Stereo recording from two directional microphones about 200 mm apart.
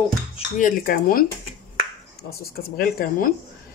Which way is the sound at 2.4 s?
45° left (ahead or behind).